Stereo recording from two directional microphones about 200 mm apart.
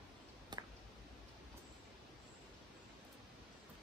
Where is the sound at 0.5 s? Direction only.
20° right (ahead or behind).